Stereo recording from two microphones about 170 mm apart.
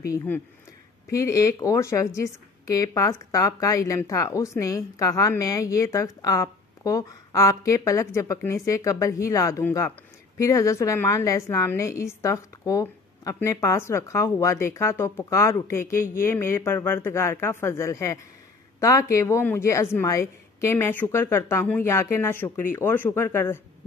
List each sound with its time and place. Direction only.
1.1 s a woman's voice: 20° left (ahead or behind)